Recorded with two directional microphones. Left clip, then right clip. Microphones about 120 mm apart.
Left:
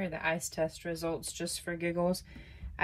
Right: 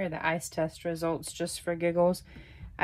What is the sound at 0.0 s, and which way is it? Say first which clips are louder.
Speech: right 3 dB; 35° right (ahead or behind).